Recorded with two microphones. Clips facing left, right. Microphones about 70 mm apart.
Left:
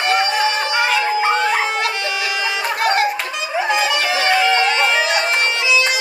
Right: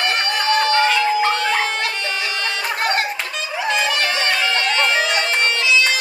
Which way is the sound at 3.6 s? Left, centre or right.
Centre.